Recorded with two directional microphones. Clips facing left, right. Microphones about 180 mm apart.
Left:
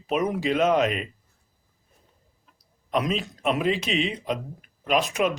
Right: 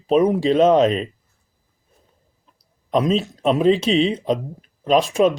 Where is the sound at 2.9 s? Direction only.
30° right (ahead or behind).